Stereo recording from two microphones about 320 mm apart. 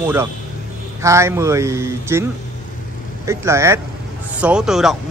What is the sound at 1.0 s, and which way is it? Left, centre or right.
Speech, centre.